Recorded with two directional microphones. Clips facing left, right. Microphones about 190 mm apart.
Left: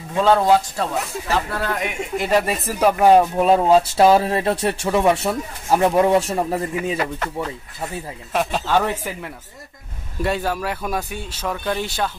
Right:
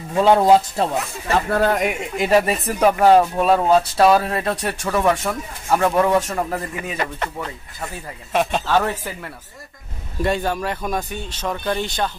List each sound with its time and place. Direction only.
0.1 s speech: 15° right (ahead or behind)
1.5 s speech: 45° right (ahead or behind)
2.2 s speech: 5° right (ahead or behind); by 7.0 s 25° left (ahead or behind)
7.2 s speech: centre (ahead or behind)